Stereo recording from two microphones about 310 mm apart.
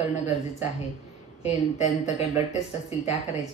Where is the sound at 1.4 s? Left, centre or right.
Left.